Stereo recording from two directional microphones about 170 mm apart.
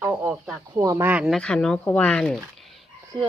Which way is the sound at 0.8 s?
20° right (ahead or behind).